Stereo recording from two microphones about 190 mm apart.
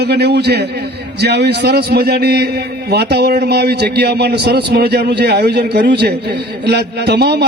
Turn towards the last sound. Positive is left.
turn(degrees=-60)  # may be behind; listen again after turning